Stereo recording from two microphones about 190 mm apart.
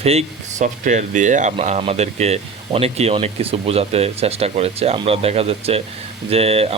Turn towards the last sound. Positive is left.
turn(degrees=-30)  # may be behind; listen again after turning